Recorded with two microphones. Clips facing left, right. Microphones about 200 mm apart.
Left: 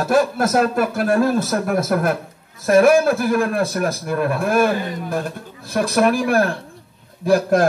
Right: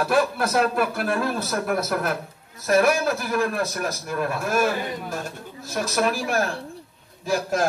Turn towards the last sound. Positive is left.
turn(degrees=60)  # may be behind; listen again after turning